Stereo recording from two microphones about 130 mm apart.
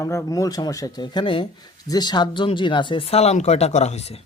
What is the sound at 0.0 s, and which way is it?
Speech, 25° left (ahead or behind).